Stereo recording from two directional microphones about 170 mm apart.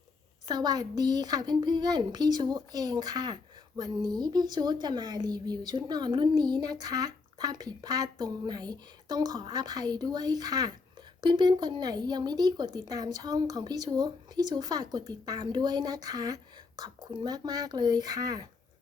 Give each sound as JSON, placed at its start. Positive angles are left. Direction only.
{"t": 0.4, "sound": "speech", "side_deg": -25}